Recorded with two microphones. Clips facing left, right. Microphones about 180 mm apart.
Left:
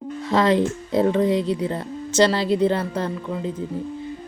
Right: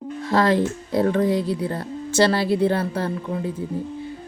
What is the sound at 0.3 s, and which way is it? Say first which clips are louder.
Speech: left 1 dB; 20° left (ahead or behind).